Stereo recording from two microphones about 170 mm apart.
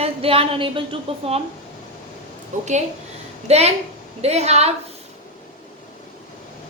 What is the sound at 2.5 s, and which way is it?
A woman's voice, 45° right (ahead or behind).